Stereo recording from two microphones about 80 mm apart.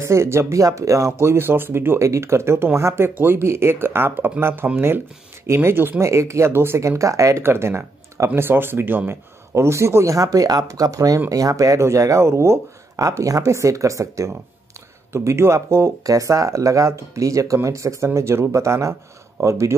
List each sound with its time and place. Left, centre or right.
0.0 s speech: right